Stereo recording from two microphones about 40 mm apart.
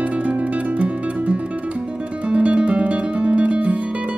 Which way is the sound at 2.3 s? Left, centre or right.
Right.